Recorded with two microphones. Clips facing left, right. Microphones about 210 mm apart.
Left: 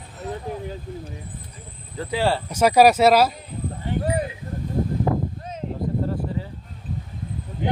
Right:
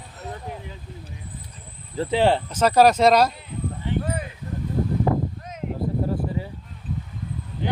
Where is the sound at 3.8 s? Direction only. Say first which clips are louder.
Left 4 dB; 40° left (ahead or behind).